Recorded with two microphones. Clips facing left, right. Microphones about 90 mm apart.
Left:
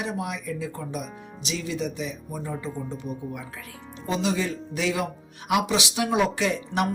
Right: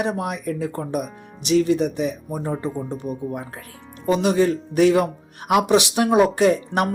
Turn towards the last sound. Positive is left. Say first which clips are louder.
# right 7 dB
turn(degrees=-45)  # may be behind; listen again after turning